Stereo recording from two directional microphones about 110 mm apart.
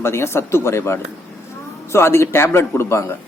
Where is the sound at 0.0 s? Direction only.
25° left (ahead or behind).